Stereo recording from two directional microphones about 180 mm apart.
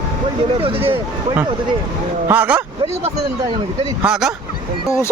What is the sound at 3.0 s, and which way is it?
Speech, 30° right (ahead or behind).